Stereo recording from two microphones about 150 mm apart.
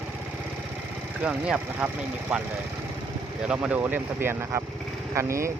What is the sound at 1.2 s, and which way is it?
Speech, 5° right (ahead or behind).